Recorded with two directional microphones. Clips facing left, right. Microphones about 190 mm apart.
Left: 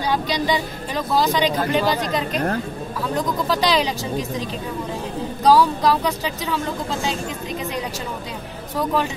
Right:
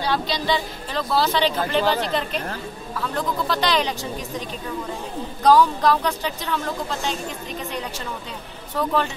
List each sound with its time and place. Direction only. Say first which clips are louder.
0.0 s speech: left 2 dB; 15° left (ahead or behind)
2.3 s a woman's voice: left 7 dB; 50° left (ahead or behind)
3.0 s speech: left 2 dB; 10° left (ahead or behind)
5.4 s speech: even; 10° left (ahead or behind)
8.7 s speech: left 1 dB; 10° left (ahead or behind)